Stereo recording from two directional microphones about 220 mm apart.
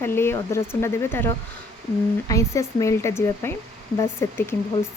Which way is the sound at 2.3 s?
15° left (ahead or behind).